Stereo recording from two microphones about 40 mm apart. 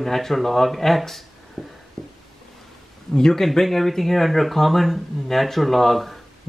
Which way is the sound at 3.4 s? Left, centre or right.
Centre.